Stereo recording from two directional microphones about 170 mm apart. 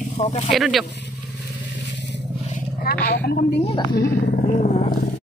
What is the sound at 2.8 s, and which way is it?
Speech, 65° left (ahead or behind).